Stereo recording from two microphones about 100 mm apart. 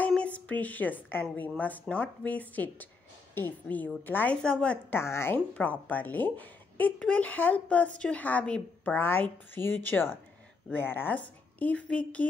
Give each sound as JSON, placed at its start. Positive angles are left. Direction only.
{"t": 0.1, "sound": "a woman's voice", "side_deg": 15}
{"t": 4.9, "sound": "speech", "side_deg": 25}
{"t": 5.5, "sound": "a woman's voice", "side_deg": 15}